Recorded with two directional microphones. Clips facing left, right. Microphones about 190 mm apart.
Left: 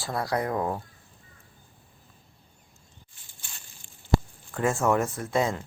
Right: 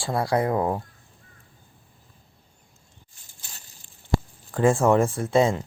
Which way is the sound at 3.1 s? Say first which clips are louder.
Right 2 dB; 40° right (ahead or behind).